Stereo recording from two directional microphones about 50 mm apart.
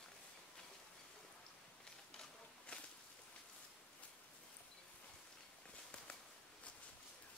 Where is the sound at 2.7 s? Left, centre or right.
Left.